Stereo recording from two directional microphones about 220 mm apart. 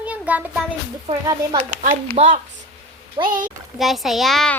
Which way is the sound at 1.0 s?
20° right (ahead or behind).